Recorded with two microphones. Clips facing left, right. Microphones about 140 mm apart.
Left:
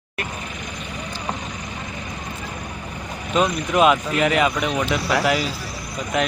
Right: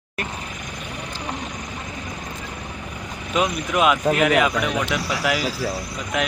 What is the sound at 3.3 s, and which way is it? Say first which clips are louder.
Speech: left 2 dB; 5° right (ahead or behind).